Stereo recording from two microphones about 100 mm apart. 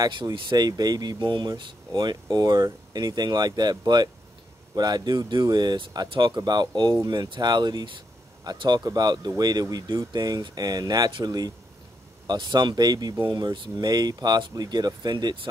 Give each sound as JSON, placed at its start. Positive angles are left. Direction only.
{"t": 0.3, "sound": "speech", "side_deg": -40}